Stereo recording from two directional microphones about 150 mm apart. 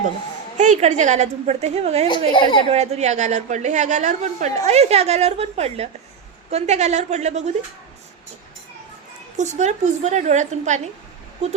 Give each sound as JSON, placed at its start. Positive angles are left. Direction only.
{"t": 0.5, "sound": "a woman's voice", "side_deg": -55}
{"t": 2.0, "sound": "speech", "side_deg": 30}
{"t": 2.6, "sound": "a woman's voice", "side_deg": -45}
{"t": 9.4, "sound": "a woman's voice", "side_deg": -50}